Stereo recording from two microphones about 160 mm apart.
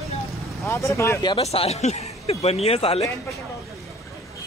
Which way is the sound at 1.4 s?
40° left (ahead or behind).